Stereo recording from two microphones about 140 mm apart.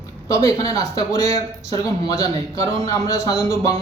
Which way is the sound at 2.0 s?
45° right (ahead or behind).